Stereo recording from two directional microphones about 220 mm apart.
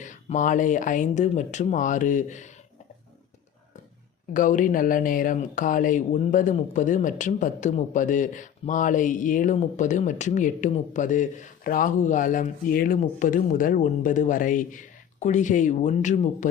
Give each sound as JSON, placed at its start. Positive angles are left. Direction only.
{"t": 0.0, "sound": "speech", "side_deg": 35}
{"t": 4.4, "sound": "speech", "side_deg": 35}